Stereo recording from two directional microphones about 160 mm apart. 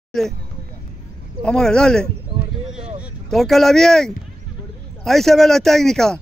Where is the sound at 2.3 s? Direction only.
30° right (ahead or behind).